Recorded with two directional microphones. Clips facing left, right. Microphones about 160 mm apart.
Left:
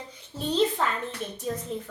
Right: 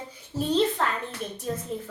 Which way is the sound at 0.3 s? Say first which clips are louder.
Right 1 dB; centre (ahead or behind).